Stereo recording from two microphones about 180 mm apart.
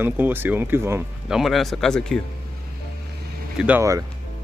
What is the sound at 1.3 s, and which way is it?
Speech, centre (ahead or behind).